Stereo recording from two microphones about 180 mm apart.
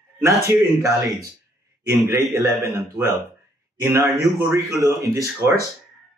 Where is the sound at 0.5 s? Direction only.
15° right (ahead or behind).